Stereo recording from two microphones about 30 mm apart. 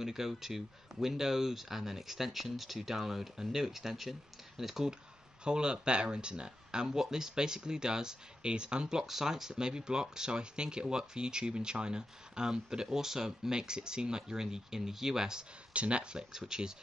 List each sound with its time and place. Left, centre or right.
0.0 s speech: centre
5.4 s speech: right
9.0 s speech: centre
9.5 s speech: right
15.7 s speech: right
16.2 s speech: right